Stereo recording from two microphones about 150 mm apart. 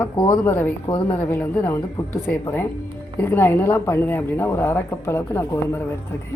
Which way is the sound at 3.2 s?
15° left (ahead or behind).